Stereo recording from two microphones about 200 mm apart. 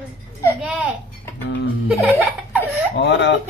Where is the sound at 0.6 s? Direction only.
5° right (ahead or behind).